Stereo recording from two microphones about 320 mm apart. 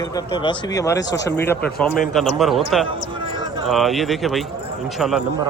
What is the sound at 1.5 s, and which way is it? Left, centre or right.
A man's voice, centre.